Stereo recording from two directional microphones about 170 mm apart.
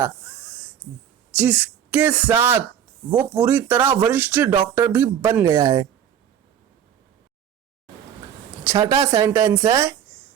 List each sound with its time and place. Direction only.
0.0 s a sound: 10° right (ahead or behind)
1.4 s speech: 10° right (ahead or behind)
8.6 s speech: 20° right (ahead or behind)